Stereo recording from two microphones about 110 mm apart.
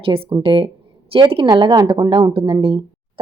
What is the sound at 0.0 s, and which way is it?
Speech, 55° right (ahead or behind).